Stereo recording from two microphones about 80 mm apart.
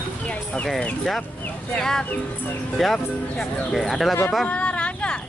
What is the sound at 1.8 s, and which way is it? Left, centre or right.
Speech, centre.